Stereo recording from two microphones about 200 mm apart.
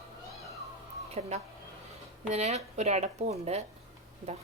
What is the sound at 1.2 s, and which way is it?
Speech, 30° right (ahead or behind).